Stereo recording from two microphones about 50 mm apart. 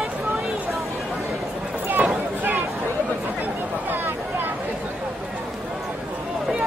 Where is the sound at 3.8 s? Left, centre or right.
Right.